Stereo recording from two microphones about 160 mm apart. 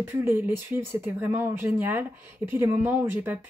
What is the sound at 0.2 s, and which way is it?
Speech, 15° right (ahead or behind).